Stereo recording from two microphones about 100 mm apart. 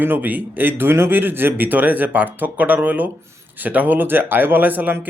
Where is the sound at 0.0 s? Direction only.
20° right (ahead or behind).